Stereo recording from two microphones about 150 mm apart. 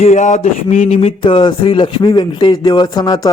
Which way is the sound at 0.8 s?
40° left (ahead or behind).